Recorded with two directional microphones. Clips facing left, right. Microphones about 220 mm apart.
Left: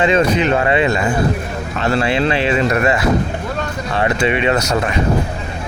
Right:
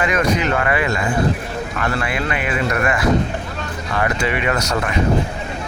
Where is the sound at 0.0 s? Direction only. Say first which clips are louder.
Left 4 dB; 25° left (ahead or behind).